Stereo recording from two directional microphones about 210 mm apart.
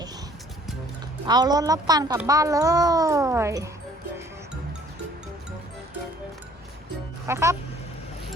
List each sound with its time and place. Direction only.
1.3 s a child's voice: 20° right (ahead or behind)
7.3 s a child's voice: 15° right (ahead or behind)